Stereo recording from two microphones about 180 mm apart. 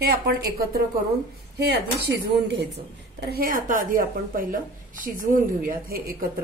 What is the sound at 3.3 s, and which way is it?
A woman's voice, 55° right (ahead or behind).